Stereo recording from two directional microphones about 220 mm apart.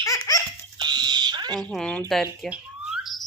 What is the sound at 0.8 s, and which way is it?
Owl, 20° right (ahead or behind).